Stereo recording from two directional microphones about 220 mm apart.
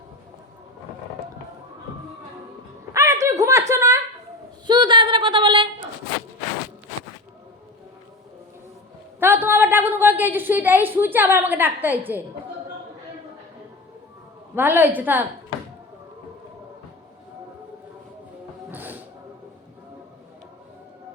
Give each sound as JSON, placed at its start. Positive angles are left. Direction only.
{"t": 2.9, "sound": "a sound", "side_deg": -15}
{"t": 9.2, "sound": "a woman's voice", "side_deg": -10}
{"t": 14.5, "sound": "a woman's voice", "side_deg": -10}
{"t": 18.7, "sound": "music", "side_deg": -10}